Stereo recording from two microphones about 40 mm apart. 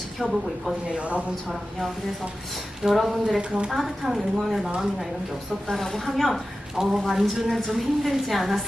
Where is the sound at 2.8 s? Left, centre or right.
Centre.